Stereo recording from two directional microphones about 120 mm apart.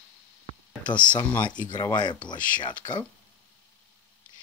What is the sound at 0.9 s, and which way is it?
Speech, 40° left (ahead or behind).